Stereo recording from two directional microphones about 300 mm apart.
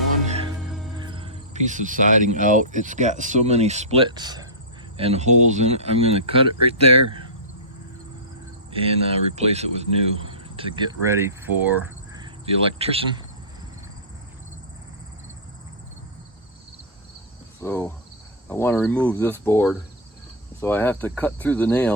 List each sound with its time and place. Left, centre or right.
0.9 s speech: centre
6.6 s speech: right
8.7 s speech: centre
17.6 s speech: centre